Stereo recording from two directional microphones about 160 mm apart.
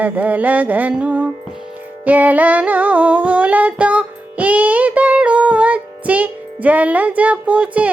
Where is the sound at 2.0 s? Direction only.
10° right (ahead or behind).